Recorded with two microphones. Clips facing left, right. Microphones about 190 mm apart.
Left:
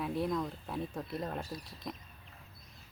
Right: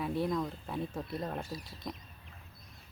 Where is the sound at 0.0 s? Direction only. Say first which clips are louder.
Right 1 dB; centre (ahead or behind).